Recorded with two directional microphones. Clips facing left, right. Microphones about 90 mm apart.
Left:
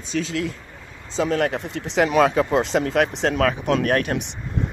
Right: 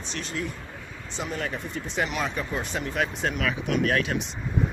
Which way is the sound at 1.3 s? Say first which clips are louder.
Left 7 dB; 75° left (ahead or behind).